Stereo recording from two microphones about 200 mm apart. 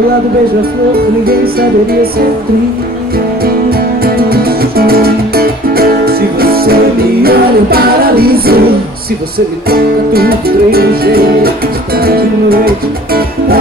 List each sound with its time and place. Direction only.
1.2 s music: 50° right (ahead or behind)
3.7 s music: 50° right (ahead or behind)
9.7 s music: 50° right (ahead or behind)